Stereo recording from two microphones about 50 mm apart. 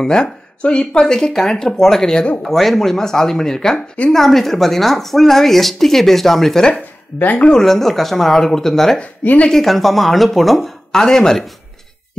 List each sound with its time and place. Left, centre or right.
0.0 s speech: centre
7.3 s speech: centre
7.6 s speech: centre
9.2 s a woman's voice: left
9.5 s speech: centre